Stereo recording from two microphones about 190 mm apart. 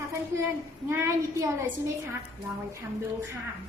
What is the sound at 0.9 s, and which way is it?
Speech, 15° right (ahead or behind).